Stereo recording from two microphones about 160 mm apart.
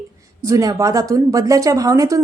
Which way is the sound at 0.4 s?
20° right (ahead or behind).